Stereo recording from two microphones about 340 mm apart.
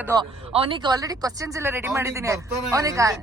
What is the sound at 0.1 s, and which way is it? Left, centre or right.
Speech, centre.